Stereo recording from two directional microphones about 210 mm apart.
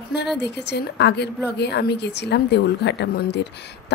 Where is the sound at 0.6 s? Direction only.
55° left (ahead or behind).